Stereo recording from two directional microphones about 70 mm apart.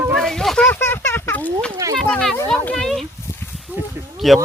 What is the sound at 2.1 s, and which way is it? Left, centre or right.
Speech, centre.